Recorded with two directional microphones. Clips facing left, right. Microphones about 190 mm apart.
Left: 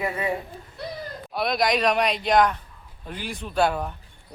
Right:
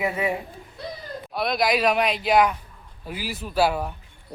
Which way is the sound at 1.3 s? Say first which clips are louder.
Even; centre (ahead or behind).